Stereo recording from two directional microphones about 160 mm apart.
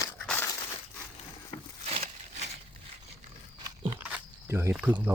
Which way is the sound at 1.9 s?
45° right (ahead or behind).